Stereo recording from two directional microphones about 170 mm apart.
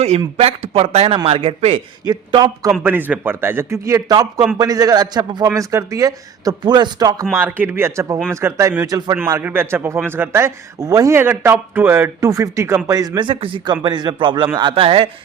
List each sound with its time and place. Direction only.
0.3 s a man's voice: 35° right (ahead or behind)
2.6 s a man's voice: 5° right (ahead or behind); by 7.3 s 25° right (ahead or behind)
7.3 s a man's voice: 10° right (ahead or behind); by 15.1 s 35° right (ahead or behind)